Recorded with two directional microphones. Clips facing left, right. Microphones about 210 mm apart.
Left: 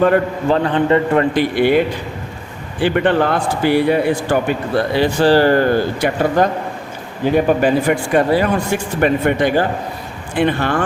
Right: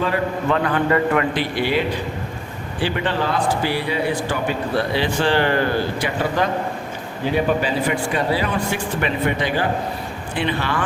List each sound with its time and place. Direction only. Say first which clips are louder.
0.4 s a man's voice: left 4 dB; 30° left (ahead or behind)
1.4 s speech: left 7 dB; 50° left (ahead or behind)
2.8 s a man's voice: left 7 dB; 55° left (ahead or behind)
4.9 s speech: left 8 dB; 40° left (ahead or behind)